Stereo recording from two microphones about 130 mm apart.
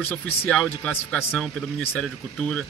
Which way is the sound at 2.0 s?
5° left (ahead or behind).